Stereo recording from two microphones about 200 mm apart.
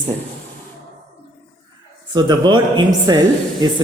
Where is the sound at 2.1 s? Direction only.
20° right (ahead or behind).